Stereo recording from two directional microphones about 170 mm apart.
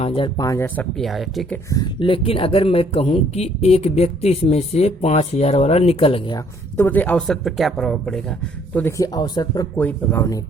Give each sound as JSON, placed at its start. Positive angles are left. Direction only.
{"t": 0.0, "sound": "speech", "side_deg": 30}
{"t": 0.9, "sound": "speech", "side_deg": 0}
{"t": 1.7, "sound": "speech", "side_deg": 25}
{"t": 6.7, "sound": "speech", "side_deg": 10}
{"t": 8.7, "sound": "speech", "side_deg": 15}
{"t": 9.7, "sound": "speech", "side_deg": 10}